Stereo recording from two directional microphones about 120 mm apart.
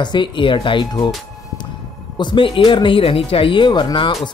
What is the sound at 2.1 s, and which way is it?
Speech, 40° left (ahead or behind).